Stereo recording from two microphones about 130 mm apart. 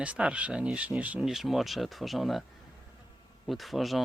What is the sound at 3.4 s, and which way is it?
Speech, centre (ahead or behind).